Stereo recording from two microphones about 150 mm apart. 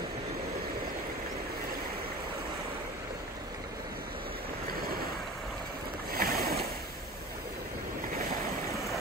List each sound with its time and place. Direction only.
6.1 s boat: 85° right